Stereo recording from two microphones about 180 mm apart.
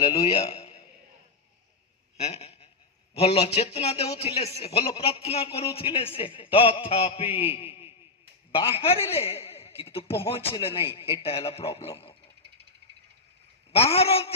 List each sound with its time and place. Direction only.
0.2 s a man's voice: 35° left (ahead or behind)
2.1 s a sound: 35° left (ahead or behind)
3.2 s a man's voice: 35° left (ahead or behind)
13.7 s a man's voice: 35° left (ahead or behind)